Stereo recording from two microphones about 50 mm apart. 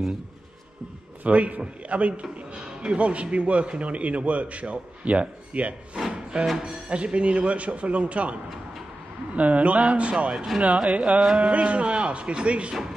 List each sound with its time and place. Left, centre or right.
1.2 s a man's voice: right
5.9 s music: centre
6.6 s a man's voice: centre
10.3 s speech: centre
10.6 s a man's voice: right